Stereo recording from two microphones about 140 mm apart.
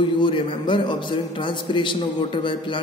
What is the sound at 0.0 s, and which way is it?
A man's voice, 35° left (ahead or behind).